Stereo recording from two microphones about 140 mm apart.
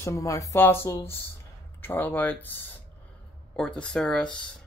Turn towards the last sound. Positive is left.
turn(degrees=5)  # may be behind; listen again after turning